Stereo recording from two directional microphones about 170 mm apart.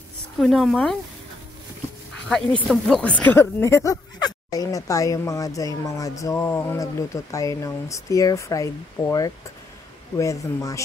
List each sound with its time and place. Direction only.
0.4 s a woman's voice: centre (ahead or behind)
2.7 s speech: 5° left (ahead or behind)